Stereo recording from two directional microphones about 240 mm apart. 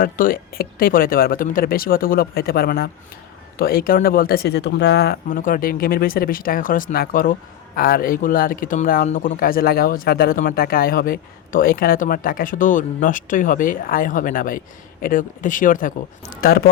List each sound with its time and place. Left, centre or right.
0.0 s speech: left